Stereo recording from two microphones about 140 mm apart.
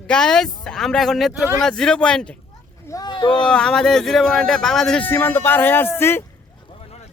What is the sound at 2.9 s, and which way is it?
Speech, 30° left (ahead or behind).